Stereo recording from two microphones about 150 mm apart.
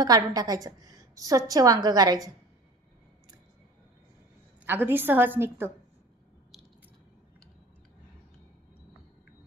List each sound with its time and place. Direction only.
0.0 s a woman's voice: 25° right (ahead or behind)
4.6 s a woman's voice: 15° right (ahead or behind)